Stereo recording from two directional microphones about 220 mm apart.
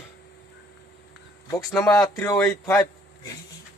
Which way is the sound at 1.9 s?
15° left (ahead or behind).